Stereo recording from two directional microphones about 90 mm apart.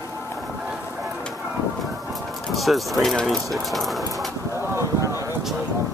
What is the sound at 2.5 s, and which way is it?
Speech, centre (ahead or behind).